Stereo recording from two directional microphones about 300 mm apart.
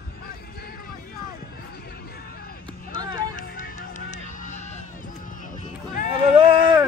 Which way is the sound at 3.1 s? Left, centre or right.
Left.